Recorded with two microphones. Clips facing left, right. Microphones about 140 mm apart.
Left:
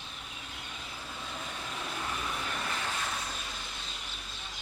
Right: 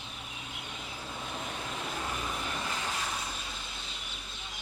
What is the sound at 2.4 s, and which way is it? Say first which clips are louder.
Vehicle: even; 20° right (ahead or behind).